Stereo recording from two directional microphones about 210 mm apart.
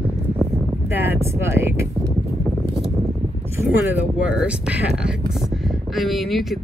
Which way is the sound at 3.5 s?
5° right (ahead or behind).